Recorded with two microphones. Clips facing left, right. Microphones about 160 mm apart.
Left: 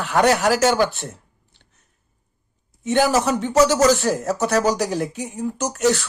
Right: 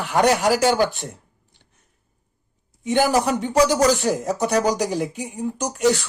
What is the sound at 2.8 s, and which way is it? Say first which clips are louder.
A man's voice: left 1 dB; 15° right (ahead or behind).